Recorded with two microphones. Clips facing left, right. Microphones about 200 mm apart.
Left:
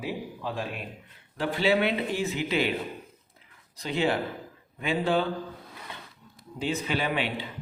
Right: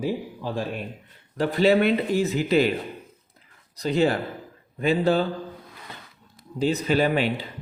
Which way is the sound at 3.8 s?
40° right (ahead or behind).